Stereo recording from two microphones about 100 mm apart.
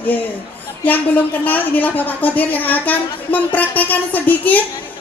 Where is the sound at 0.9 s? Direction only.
15° left (ahead or behind).